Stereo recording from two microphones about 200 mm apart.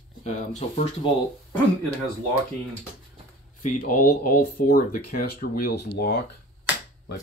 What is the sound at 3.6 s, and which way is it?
Speech, 45° left (ahead or behind).